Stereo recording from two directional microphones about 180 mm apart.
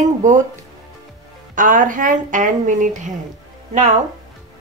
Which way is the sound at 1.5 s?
45° right (ahead or behind).